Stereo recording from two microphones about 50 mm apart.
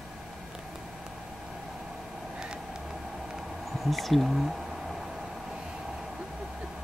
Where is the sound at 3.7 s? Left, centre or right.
Centre.